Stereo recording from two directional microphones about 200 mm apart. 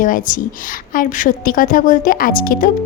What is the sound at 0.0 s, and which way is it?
A woman's voice, 45° left (ahead or behind).